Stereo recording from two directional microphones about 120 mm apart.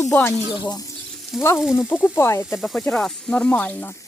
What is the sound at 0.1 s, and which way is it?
Speech, 20° left (ahead or behind).